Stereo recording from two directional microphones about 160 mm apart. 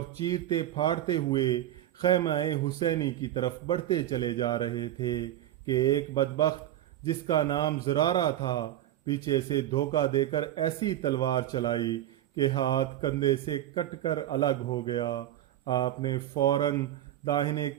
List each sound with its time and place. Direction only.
0.3 s a man's voice: 25° left (ahead or behind)